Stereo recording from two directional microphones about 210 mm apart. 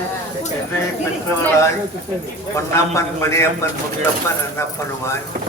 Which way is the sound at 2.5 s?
15° left (ahead or behind).